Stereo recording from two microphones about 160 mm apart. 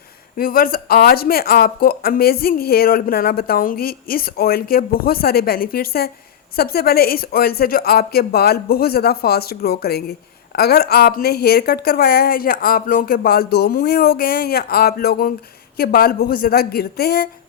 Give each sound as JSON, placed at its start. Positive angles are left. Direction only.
{"t": 0.3, "sound": "speech", "side_deg": 65}